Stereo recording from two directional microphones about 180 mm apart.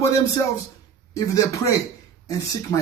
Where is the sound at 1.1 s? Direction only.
15° left (ahead or behind).